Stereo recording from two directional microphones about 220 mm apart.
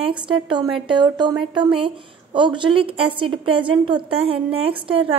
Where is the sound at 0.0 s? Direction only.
20° right (ahead or behind).